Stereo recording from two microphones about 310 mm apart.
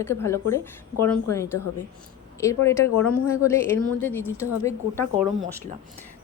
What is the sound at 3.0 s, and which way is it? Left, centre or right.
Speech, left.